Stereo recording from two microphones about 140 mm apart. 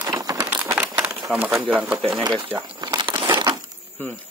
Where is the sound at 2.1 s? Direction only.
35° right (ahead or behind).